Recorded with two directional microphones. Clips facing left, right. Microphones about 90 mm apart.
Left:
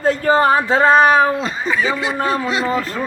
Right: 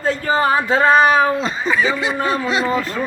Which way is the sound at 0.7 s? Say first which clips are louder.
Even; 30° left (ahead or behind).